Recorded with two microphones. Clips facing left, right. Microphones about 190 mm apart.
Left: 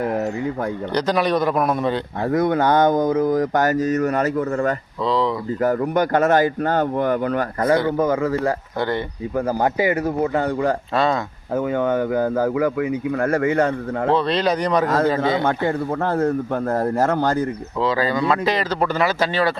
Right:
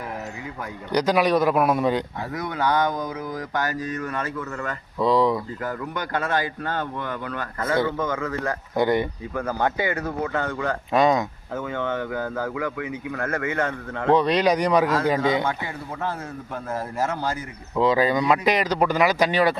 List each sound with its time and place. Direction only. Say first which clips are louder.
0.9 s speech: even; 10° right (ahead or behind)
2.2 s speech: left 8 dB; 50° left (ahead or behind)
5.9 s speech: left 8 dB; 45° left (ahead or behind)
8.8 s speech: right 3 dB; 15° right (ahead or behind)
9.3 s speech: left 5 dB; 30° left (ahead or behind)
10.9 s speech: right 3 dB; 15° right (ahead or behind)
11.5 s speech: left 7 dB; 40° left (ahead or behind)
14.1 s speech: right 1 dB; 15° right (ahead or behind)
15.4 s a man's voice: left 9 dB; 60° left (ahead or behind)
17.7 s speech: right 1 dB; 20° right (ahead or behind)